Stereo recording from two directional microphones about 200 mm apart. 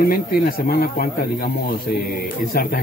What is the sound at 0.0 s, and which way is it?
Speech, 50° left (ahead or behind).